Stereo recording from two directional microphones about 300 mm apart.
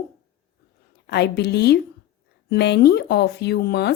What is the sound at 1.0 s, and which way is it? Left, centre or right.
Speech, left.